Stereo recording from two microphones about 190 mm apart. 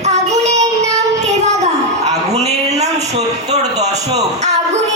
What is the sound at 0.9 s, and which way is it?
Child singing, 35° right (ahead or behind).